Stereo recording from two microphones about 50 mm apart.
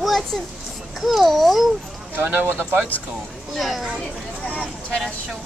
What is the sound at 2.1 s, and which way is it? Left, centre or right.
Speech, right.